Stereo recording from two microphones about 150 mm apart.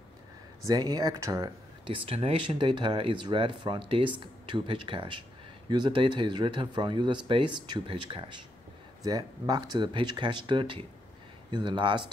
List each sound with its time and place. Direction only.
0.7 s speech: 25° right (ahead or behind)
1.9 s speech: 40° right (ahead or behind)